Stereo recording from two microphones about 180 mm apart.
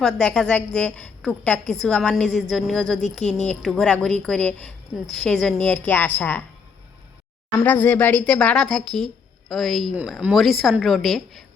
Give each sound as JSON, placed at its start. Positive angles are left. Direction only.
{"t": 0.0, "sound": "a woman's voice", "side_deg": 5}
{"t": 7.6, "sound": "a woman's voice", "side_deg": 10}